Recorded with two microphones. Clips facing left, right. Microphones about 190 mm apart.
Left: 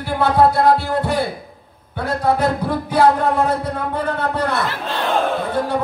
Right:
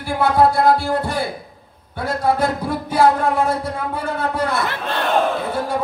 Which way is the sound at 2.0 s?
10° right (ahead or behind).